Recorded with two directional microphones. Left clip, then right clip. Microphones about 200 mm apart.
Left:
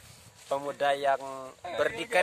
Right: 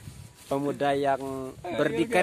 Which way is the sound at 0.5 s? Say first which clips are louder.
Right 2 dB; 5° left (ahead or behind).